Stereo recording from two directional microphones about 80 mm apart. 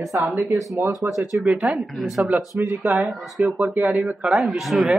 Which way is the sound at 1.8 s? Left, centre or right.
Centre.